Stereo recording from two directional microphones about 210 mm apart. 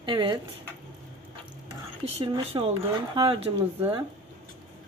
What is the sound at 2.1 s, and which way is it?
Speech, 25° right (ahead or behind).